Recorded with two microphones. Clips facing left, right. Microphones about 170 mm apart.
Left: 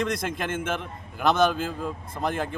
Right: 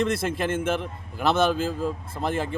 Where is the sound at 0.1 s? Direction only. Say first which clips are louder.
Right 3 dB; 5° right (ahead or behind).